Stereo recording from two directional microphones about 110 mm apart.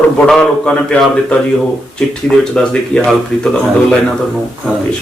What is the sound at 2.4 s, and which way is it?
Speech, 5° left (ahead or behind).